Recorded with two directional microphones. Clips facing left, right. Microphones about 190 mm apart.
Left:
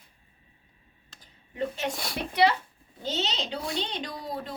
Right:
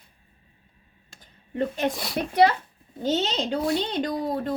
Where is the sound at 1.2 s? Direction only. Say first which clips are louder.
Right 4 dB; 50° right (ahead or behind).